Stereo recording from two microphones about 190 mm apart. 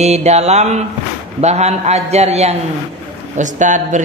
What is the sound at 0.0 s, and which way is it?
Speech, 35° right (ahead or behind).